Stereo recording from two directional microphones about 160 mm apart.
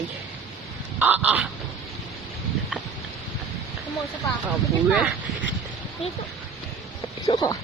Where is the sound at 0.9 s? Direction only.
10° right (ahead or behind).